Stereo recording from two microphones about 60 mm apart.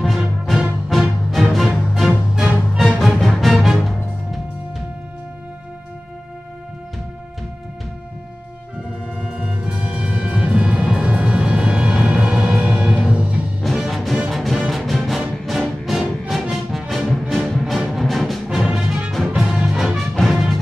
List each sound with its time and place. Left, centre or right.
0.0 s music: centre
9.2 s music: centre
13.6 s music: centre